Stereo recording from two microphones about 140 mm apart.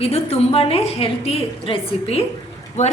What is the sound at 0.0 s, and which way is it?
A woman's voice, 45° left (ahead or behind).